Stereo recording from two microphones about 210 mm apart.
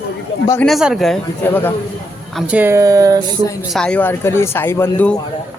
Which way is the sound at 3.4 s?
15° left (ahead or behind).